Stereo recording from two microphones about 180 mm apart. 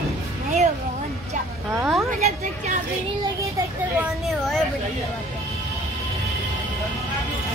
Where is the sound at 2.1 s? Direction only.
40° right (ahead or behind).